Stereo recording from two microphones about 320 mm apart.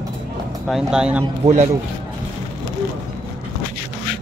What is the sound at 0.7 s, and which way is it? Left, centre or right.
Speech, centre.